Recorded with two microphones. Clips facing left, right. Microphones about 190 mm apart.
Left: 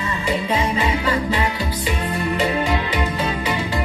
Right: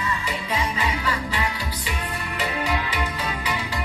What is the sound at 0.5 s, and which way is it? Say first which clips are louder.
Music: left 5 dB; 25° left (ahead or behind).